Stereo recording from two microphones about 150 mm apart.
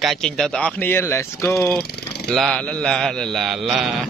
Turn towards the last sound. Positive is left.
turn(degrees=0)  # may be behind; listen again after turning